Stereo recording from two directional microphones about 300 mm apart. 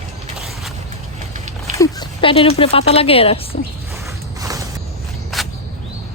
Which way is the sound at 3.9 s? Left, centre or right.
Centre.